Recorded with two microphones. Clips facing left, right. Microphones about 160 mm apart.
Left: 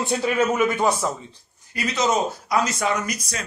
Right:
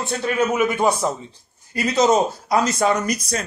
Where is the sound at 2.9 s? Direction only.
35° right (ahead or behind).